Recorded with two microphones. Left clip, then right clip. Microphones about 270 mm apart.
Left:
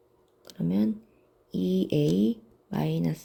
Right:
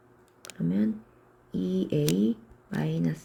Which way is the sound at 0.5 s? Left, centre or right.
Centre.